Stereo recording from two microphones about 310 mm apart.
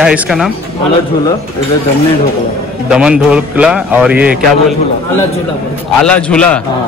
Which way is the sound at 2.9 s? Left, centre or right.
Centre.